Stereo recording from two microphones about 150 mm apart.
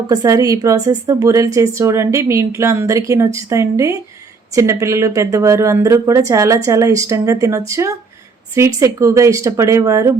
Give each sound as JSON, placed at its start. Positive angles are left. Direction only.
{"t": 0.1, "sound": "a woman's voice", "side_deg": -25}